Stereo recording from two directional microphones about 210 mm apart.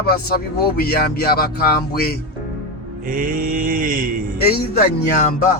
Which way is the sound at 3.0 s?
40° right (ahead or behind).